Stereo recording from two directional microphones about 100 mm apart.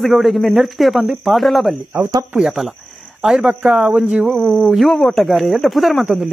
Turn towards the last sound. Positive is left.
turn(degrees=-5)  # may be behind; listen again after turning